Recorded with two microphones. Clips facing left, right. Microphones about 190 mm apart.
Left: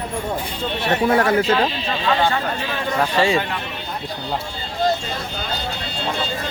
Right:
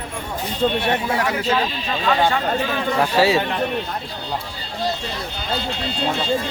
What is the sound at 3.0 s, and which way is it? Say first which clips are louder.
Speech: right 1 dB; 5° right (ahead or behind).